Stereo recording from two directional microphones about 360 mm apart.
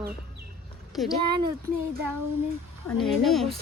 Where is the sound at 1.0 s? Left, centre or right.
Centre.